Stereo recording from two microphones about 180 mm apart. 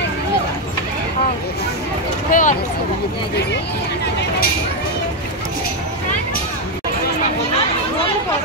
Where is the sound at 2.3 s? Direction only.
45° left (ahead or behind).